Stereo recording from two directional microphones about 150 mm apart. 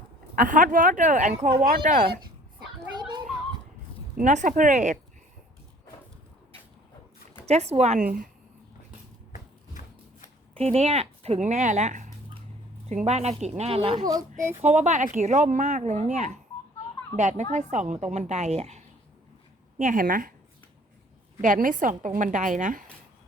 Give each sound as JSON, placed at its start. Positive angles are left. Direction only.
{"t": 0.3, "sound": "a woman's voice", "side_deg": -60}
{"t": 1.6, "sound": "speech", "side_deg": -70}
{"t": 2.6, "sound": "a sound", "side_deg": -30}
{"t": 4.2, "sound": "speech", "side_deg": -55}
{"t": 7.4, "sound": "speech", "side_deg": -45}
{"t": 10.5, "sound": "speech", "side_deg": -45}
{"t": 14.6, "sound": "speech", "side_deg": -50}
{"t": 19.8, "sound": "a woman's voice", "side_deg": -60}
{"t": 21.4, "sound": "a woman's voice", "side_deg": -60}